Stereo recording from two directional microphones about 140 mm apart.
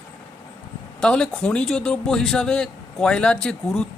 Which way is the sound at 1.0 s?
5° left (ahead or behind).